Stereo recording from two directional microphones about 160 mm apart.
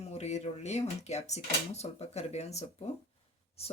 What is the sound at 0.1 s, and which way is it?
Speech, 45° left (ahead or behind).